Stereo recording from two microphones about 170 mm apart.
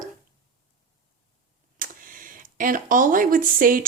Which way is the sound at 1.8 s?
55° right (ahead or behind).